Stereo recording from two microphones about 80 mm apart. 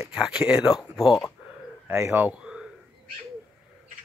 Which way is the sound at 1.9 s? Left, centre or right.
Right.